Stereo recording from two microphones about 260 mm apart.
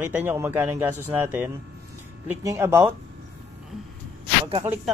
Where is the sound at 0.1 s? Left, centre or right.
Centre.